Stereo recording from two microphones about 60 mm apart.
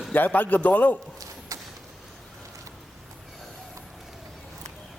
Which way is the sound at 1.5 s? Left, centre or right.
Right.